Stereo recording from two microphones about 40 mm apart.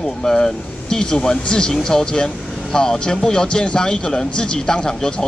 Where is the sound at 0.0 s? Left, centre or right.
Centre.